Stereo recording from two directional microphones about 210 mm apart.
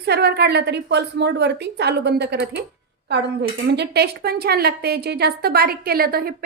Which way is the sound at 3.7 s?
50° right (ahead or behind).